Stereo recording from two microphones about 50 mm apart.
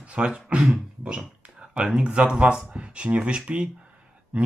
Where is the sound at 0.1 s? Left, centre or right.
Right.